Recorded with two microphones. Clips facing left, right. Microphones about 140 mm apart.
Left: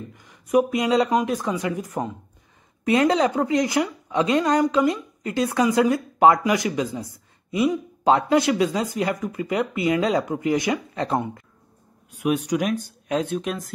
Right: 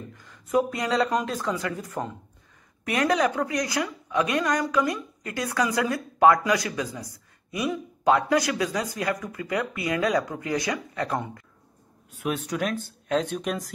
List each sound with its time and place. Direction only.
0.1 s a woman's voice: 15° left (ahead or behind)
12.2 s speech: 15° left (ahead or behind)